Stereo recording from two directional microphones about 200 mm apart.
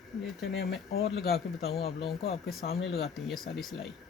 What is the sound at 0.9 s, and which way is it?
Speech, 50° left (ahead or behind).